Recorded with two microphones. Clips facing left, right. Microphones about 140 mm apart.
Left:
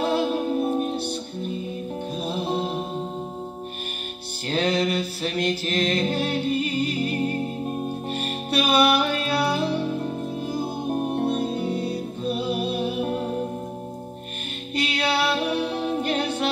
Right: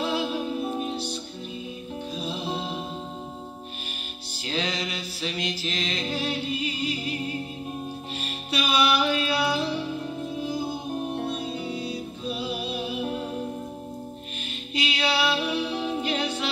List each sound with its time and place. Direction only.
0.0 s music: 55° left (ahead or behind)
4.5 s music: 55° left (ahead or behind)
14.7 s music: 55° left (ahead or behind)